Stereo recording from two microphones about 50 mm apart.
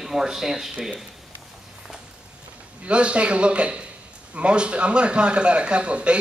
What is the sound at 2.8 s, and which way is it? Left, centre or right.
A man's voice, right.